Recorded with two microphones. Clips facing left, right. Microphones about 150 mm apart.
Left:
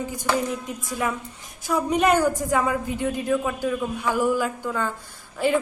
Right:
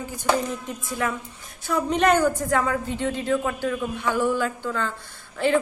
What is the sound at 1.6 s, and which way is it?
A woman's voice, 10° left (ahead or behind).